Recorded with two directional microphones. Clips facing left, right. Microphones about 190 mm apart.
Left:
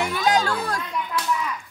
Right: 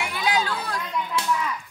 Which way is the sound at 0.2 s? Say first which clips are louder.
Left 2 dB; 45° left (ahead or behind).